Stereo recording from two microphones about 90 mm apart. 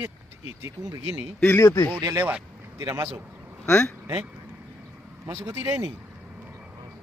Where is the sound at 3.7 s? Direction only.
25° left (ahead or behind).